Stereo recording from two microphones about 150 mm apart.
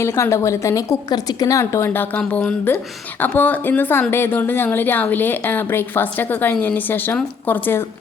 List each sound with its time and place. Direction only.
0.0 s a woman's voice: 20° left (ahead or behind)